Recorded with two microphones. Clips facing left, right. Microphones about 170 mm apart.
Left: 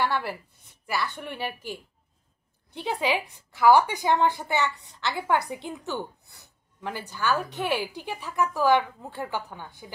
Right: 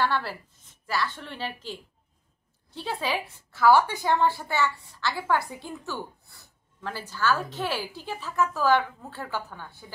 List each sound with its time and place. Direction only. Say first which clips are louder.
0.0 s a woman's voice: even; 15° left (ahead or behind)